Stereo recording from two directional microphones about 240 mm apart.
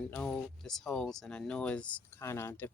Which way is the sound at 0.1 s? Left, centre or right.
Centre.